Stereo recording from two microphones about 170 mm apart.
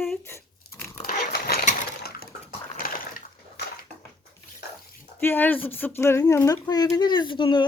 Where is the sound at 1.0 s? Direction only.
60° left (ahead or behind).